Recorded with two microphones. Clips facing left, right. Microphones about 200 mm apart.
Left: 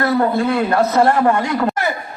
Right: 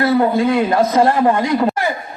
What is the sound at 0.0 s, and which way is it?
A man's voice, 10° right (ahead or behind).